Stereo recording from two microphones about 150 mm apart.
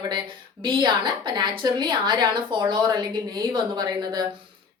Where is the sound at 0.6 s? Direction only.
30° right (ahead or behind).